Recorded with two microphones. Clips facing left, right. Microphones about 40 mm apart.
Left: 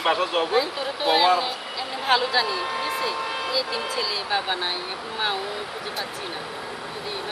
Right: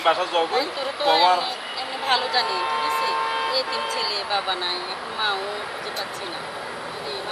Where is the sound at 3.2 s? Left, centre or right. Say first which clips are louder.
Right 4 dB; centre.